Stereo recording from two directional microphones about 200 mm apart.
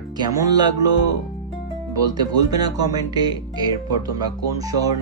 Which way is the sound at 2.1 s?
20° right (ahead or behind).